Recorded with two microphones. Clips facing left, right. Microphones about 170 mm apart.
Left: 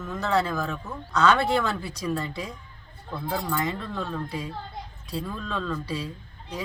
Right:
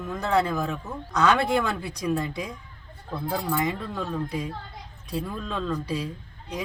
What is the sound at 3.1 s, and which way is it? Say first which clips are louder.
Speech: right 1 dB; centre (ahead or behind).